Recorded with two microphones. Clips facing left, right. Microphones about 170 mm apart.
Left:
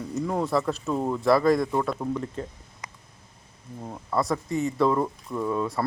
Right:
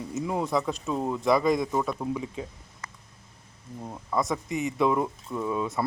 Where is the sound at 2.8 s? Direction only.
15° left (ahead or behind).